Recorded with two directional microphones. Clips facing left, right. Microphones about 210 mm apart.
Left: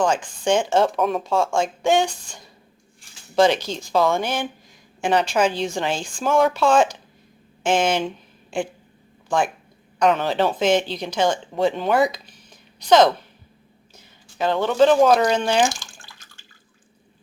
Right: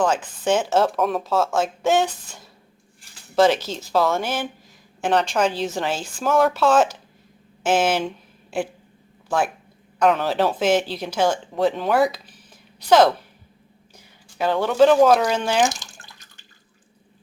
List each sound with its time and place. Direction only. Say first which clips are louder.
0.0 s speech: even; 5° right (ahead or behind)
15.7 s drip: left 1 dB; 20° right (ahead or behind)